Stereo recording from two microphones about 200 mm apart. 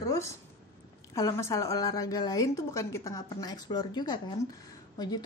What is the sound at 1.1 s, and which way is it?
A woman's voice, 15° left (ahead or behind).